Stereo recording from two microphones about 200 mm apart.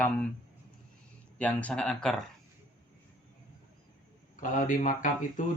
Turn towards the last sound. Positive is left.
turn(degrees=40)  # may be behind; listen again after turning